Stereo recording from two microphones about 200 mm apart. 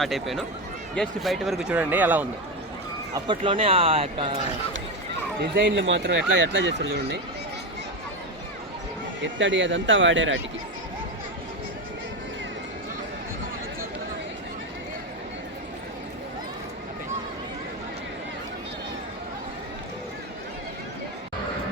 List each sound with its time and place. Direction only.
0.0 s speech: centre (ahead or behind)
3.1 s speech: 25° right (ahead or behind)
5.5 s speech: 60° right (ahead or behind)
9.2 s speech: 65° right (ahead or behind)